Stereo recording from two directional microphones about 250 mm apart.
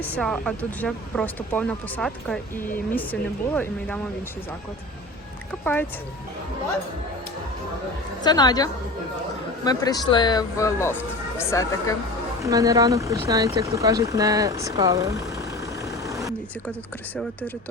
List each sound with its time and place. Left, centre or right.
0.0 s speech: centre
8.2 s speech: centre
12.4 s speech: centre